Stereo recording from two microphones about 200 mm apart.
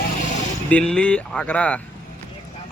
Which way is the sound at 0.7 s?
5° left (ahead or behind).